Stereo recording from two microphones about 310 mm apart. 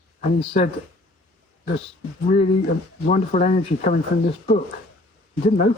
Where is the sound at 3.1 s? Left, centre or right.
Left.